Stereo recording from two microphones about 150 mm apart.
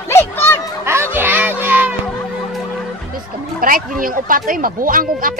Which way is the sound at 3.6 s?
70° right (ahead or behind).